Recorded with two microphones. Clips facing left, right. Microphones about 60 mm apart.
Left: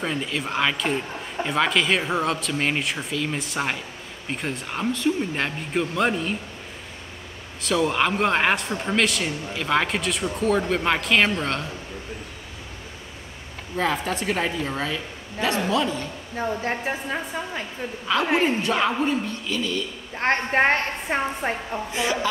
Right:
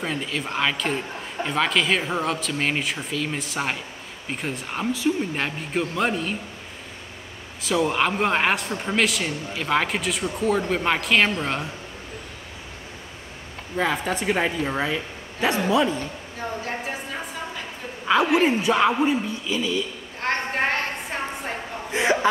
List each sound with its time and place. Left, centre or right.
0.0 s speech: centre
7.6 s speech: centre
13.7 s speech: centre
18.4 s speech: centre
20.2 s a woman's voice: left
21.9 s a woman's voice: right